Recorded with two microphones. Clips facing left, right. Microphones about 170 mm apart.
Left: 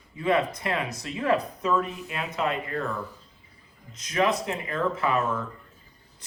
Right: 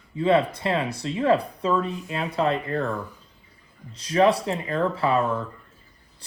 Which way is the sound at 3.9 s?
35° right (ahead or behind).